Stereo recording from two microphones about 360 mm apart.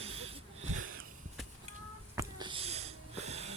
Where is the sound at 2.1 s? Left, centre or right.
Centre.